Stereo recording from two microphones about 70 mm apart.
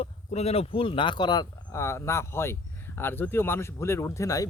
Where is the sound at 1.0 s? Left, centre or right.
Left.